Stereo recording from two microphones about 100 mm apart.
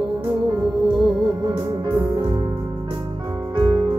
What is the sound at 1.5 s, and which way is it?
Music, 50° right (ahead or behind).